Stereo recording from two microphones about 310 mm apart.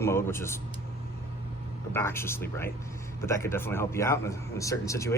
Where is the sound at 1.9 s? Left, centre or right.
Centre.